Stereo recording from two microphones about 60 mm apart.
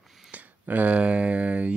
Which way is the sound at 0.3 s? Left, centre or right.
Right.